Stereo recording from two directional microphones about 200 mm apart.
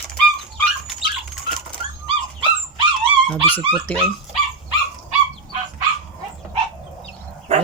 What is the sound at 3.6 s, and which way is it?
Speech, 5° left (ahead or behind).